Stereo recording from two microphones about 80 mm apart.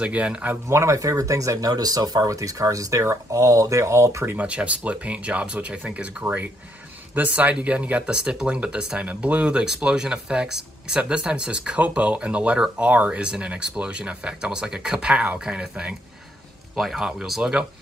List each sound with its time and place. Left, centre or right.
0.0 s speech: centre
0.7 s speech: right
4.4 s speech: centre